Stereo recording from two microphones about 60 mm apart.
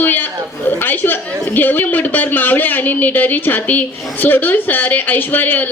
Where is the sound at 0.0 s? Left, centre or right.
Left.